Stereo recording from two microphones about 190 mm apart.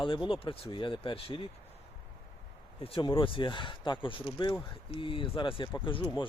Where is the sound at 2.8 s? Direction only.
30° left (ahead or behind).